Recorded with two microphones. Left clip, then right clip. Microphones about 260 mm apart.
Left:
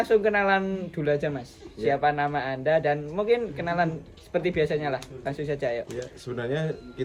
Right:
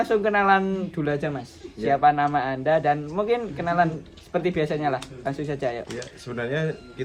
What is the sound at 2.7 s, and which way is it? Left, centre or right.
Speech, centre.